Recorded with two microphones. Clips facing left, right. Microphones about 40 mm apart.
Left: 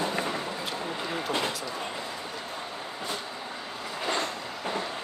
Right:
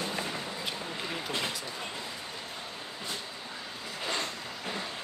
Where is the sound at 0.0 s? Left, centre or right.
Left.